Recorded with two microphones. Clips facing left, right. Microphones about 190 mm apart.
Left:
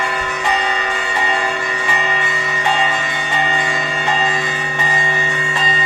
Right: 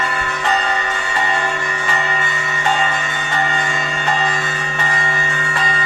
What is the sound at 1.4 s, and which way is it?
Music, 15° left (ahead or behind).